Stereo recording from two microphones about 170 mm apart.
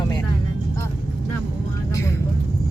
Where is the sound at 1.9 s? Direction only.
15° left (ahead or behind).